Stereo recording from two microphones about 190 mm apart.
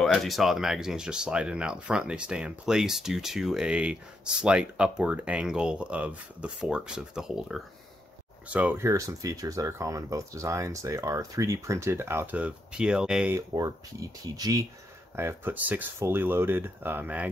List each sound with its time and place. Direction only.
0.0 s speech: centre (ahead or behind)
13.3 s speech: 15° right (ahead or behind)